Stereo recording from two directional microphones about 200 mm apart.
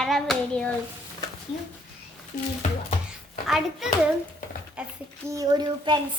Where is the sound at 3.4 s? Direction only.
Centre (ahead or behind).